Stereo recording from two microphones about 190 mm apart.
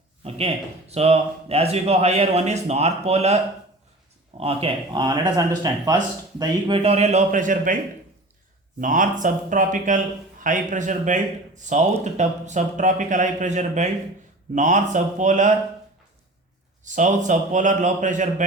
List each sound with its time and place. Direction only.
0.3 s speech: 30° right (ahead or behind)
4.4 s speech: 30° right (ahead or behind)
8.8 s speech: 45° right (ahead or behind)
16.8 s speech: 40° right (ahead or behind)